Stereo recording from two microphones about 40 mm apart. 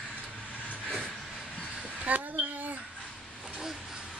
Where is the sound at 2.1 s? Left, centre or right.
Right.